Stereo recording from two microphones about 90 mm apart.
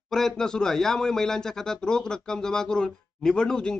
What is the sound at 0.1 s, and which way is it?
A man's voice, 5° left (ahead or behind).